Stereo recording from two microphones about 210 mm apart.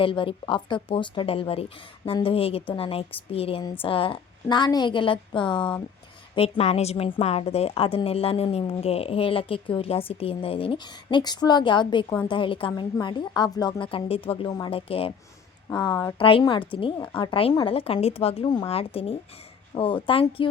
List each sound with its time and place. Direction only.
0.0 s a woman's voice: 25° left (ahead or behind)